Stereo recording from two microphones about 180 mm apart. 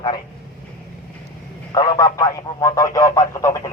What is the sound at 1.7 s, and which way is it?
Speech, 20° left (ahead or behind).